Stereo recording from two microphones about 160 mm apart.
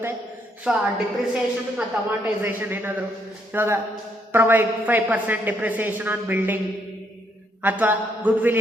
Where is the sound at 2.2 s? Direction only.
10° right (ahead or behind).